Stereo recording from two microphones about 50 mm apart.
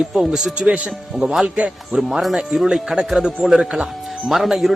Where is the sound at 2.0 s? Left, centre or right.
Centre.